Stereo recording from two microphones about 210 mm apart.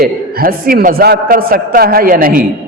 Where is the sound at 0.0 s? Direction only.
45° right (ahead or behind).